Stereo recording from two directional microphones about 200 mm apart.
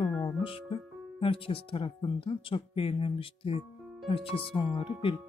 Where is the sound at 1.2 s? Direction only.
25° left (ahead or behind).